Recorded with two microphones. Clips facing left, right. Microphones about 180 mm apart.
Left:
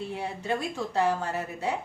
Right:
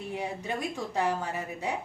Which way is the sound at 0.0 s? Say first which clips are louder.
Left 1 dB; 15° right (ahead or behind).